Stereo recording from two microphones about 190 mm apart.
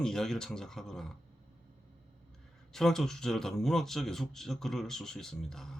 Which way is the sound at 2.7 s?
Centre (ahead or behind).